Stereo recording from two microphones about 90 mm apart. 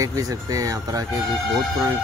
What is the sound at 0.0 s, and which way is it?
Speech, 40° right (ahead or behind).